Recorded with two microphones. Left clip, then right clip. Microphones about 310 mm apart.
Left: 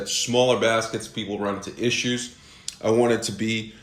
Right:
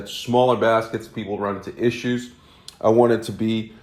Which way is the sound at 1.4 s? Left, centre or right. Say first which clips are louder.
Right 3 dB; centre.